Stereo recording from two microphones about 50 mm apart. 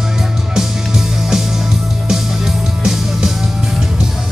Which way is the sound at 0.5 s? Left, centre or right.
Centre.